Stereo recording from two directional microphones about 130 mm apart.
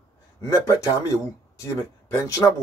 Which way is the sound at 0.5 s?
25° left (ahead or behind).